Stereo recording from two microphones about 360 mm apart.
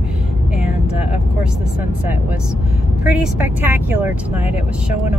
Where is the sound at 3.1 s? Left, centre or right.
Centre.